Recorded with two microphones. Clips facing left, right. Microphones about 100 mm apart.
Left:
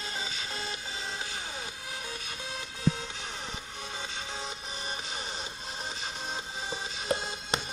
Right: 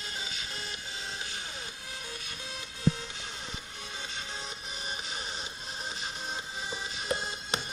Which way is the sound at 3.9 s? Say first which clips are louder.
Left 1 dB; 30° left (ahead or behind).